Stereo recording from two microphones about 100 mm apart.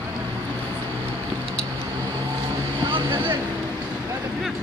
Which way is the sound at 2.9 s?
55° right (ahead or behind).